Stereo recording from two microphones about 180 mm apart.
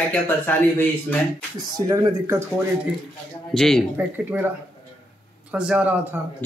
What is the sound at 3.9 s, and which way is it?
Speech, 10° right (ahead or behind).